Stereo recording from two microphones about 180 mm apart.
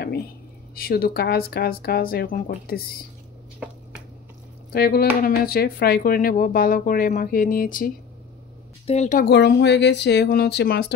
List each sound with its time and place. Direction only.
0.7 s speech: 55° left (ahead or behind)
3.5 s finger snapping: 5° right (ahead or behind)
4.7 s speech: 60° left (ahead or behind)
8.8 s speech: 40° left (ahead or behind)
9.2 s speech: 65° left (ahead or behind)